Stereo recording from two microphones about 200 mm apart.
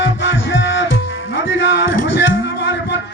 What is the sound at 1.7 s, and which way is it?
Music, 65° left (ahead or behind).